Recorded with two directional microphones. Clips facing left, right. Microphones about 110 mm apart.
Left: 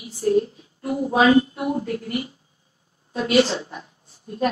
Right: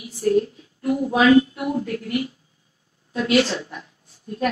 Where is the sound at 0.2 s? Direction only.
20° left (ahead or behind).